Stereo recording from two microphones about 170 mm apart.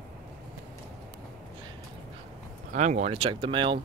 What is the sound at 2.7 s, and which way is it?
Speech, 45° right (ahead or behind).